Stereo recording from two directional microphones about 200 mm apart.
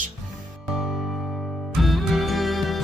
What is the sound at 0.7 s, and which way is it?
Music, centre (ahead or behind).